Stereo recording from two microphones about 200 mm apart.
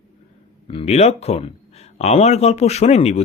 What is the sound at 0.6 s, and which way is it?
Speech, 30° left (ahead or behind).